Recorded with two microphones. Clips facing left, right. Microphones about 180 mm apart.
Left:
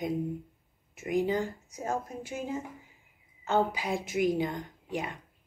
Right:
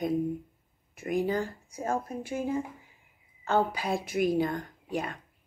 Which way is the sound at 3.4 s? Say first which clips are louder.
Right 1 dB; 15° left (ahead or behind).